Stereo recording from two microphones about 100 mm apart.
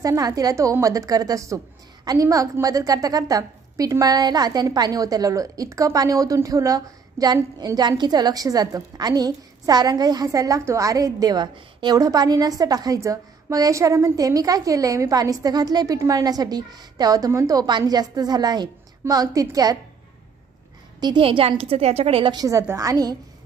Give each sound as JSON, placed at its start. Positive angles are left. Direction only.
{"t": 0.0, "sound": "a woman's voice", "side_deg": -35}
{"t": 21.2, "sound": "a woman's voice", "side_deg": -65}
{"t": 22.3, "sound": "a woman's voice", "side_deg": -35}